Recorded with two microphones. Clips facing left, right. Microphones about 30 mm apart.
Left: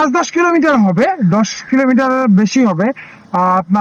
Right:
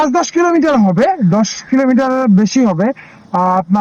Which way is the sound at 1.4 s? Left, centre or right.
Left.